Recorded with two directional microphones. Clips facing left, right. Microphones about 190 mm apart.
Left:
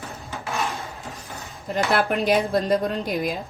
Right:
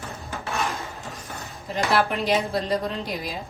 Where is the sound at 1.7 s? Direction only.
50° left (ahead or behind).